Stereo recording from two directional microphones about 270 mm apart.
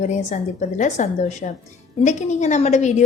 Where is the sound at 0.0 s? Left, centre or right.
Left.